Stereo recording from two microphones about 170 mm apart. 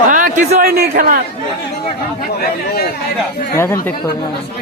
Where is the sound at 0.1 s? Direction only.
50° right (ahead or behind).